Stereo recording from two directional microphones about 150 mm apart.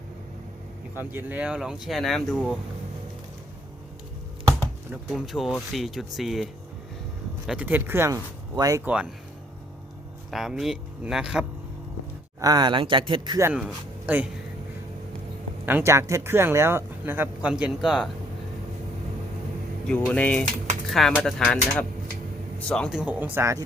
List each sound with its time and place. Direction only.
0.9 s speech: 10° right (ahead or behind)
5.0 s speech: centre (ahead or behind); by 8.8 s 25° right (ahead or behind)
8.8 s speech: 10° right (ahead or behind)
10.3 s speech: centre (ahead or behind)
12.4 s speech: 25° right (ahead or behind)
13.4 s speech: 5° right (ahead or behind)
15.6 s speech: 15° right (ahead or behind)
20.1 s a man's voice: 10° left (ahead or behind)
23.0 s speech: 10° right (ahead or behind)